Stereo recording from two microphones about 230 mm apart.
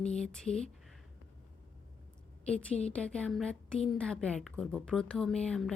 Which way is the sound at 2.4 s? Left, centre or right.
Centre.